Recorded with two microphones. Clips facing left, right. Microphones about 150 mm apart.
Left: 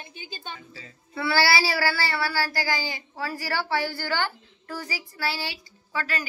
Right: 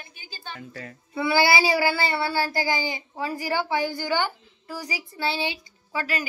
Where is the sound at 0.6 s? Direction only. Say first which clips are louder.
Right 7 dB; 60° right (ahead or behind).